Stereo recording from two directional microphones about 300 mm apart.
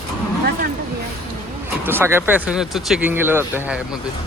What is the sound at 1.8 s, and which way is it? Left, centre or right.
Speech, centre.